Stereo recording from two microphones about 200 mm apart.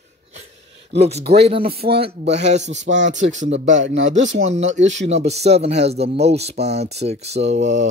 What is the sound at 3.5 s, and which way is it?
Speech, 70° right (ahead or behind).